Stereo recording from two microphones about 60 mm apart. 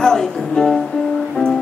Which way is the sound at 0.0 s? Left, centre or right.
Centre.